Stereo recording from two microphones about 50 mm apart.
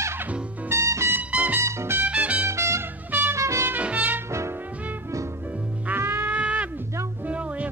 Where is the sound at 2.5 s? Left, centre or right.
Right.